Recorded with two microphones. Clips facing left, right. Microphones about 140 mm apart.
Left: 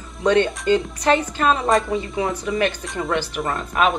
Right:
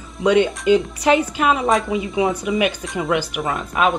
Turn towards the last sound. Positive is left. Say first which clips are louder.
# right 1 dB
turn(degrees=0)  # may be behind; listen again after turning